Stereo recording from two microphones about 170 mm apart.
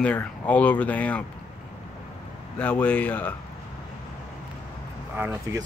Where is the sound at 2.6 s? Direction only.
10° left (ahead or behind).